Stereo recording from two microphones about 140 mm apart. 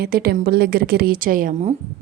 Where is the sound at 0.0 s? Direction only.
90° right.